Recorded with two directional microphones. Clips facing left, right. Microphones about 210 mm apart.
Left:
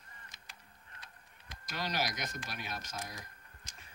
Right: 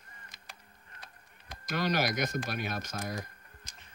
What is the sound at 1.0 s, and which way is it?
Speech, 55° right (ahead or behind).